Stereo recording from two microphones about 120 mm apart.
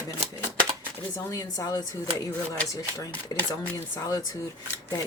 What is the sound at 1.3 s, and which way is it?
Speech, 30° left (ahead or behind).